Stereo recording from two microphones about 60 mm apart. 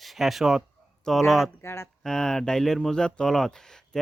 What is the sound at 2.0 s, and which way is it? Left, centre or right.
Speech, centre.